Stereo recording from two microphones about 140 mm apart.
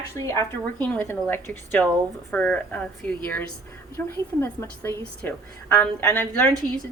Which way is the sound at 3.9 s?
15° left (ahead or behind).